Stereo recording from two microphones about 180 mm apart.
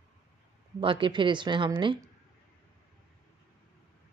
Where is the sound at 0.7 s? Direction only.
25° right (ahead or behind).